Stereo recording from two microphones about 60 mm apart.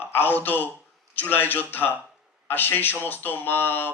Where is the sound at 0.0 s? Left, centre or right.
Left.